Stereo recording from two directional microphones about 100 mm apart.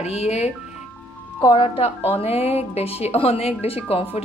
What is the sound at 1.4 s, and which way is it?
Speech, 55° left (ahead or behind).